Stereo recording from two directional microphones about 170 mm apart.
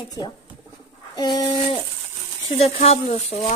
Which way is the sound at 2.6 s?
40° left (ahead or behind).